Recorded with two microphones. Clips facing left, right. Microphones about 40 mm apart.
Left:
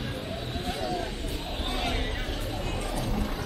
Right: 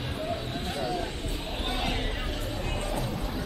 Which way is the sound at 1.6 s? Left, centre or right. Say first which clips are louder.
Even; centre.